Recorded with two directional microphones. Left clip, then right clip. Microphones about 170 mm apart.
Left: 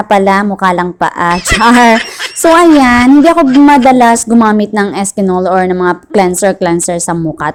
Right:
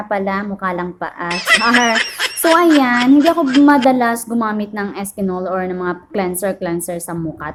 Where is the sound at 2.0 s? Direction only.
Centre (ahead or behind).